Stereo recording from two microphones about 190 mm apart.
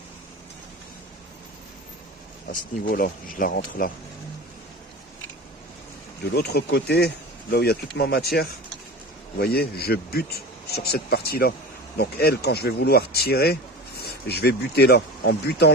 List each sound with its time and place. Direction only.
2.8 s speech: 50° left (ahead or behind)
6.3 s speech: 60° left (ahead or behind)